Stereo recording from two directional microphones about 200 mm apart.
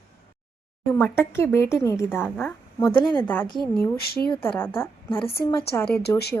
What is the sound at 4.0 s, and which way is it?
Speech, 50° left (ahead or behind).